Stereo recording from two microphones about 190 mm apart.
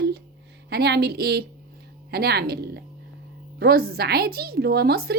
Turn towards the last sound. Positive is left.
turn(degrees=-55)  # may be behind; listen again after turning